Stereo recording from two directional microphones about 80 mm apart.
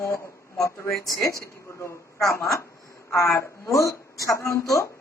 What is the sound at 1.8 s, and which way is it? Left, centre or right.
A woman's voice, left.